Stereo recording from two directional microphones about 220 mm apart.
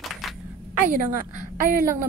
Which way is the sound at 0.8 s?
40° right (ahead or behind).